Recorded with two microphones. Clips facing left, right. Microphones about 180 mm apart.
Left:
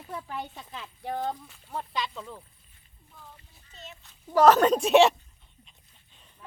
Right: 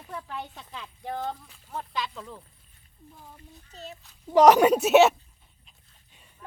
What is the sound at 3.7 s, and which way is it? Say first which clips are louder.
Speech: right 5 dB; 40° right (ahead or behind).